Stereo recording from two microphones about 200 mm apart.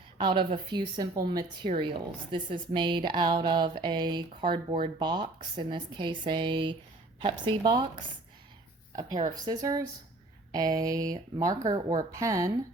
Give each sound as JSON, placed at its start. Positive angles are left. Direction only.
{"t": 0.2, "sound": "a woman's voice", "side_deg": -25}
{"t": 9.0, "sound": "a woman's voice", "side_deg": -20}